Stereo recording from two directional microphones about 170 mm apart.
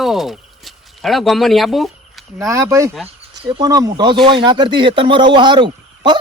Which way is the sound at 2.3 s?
15° right (ahead or behind).